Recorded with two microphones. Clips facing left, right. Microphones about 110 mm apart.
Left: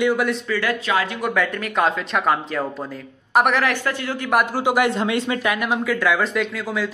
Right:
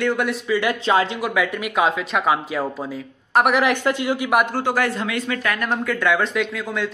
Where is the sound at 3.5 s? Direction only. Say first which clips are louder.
Right 3 dB; 20° right (ahead or behind).